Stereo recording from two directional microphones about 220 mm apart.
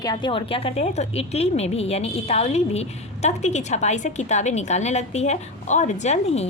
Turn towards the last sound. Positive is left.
turn(degrees=30)  # may be behind; listen again after turning